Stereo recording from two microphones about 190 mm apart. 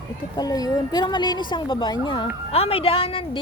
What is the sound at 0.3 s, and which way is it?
A woman's voice, 20° left (ahead or behind).